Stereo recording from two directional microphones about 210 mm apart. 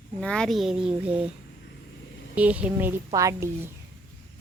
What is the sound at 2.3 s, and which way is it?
A woman's voice, 5° right (ahead or behind).